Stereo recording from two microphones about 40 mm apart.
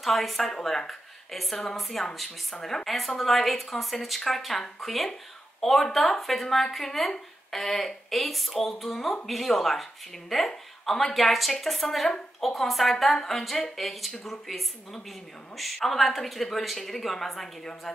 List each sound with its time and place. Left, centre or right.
0.0 s a woman's voice: centre